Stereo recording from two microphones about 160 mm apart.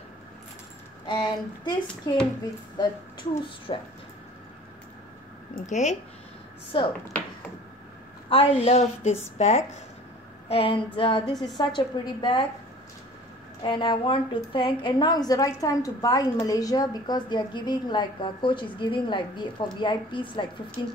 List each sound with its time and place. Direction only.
1.0 s a woman's voice: 30° left (ahead or behind)
2.8 s a woman's voice: 30° left (ahead or behind)
5.7 s speech: 45° left (ahead or behind)
8.3 s a woman's voice: 35° left (ahead or behind)
13.6 s a woman's voice: 30° left (ahead or behind)